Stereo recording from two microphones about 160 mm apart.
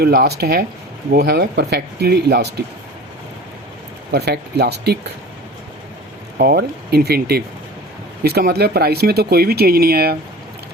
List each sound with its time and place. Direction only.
0.0 s speech: 75° right (ahead or behind)
4.1 s speech: 90° right
6.3 s speech: 85° right